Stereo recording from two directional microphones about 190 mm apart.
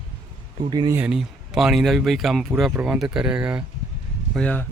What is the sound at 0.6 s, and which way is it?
Speech, 25° right (ahead or behind).